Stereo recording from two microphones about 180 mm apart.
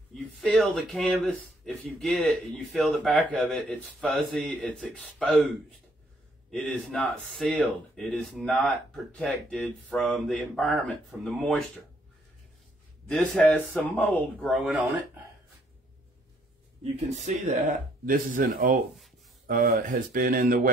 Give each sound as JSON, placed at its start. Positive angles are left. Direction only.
{"t": 0.1, "sound": "speech", "side_deg": 0}
{"t": 6.5, "sound": "speech", "side_deg": 5}
{"t": 13.1, "sound": "speech", "side_deg": 0}
{"t": 16.8, "sound": "speech", "side_deg": -35}
{"t": 18.0, "sound": "speech", "side_deg": -50}